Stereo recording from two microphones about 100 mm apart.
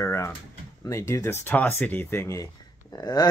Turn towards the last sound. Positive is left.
turn(degrees=40)  # may be behind; listen again after turning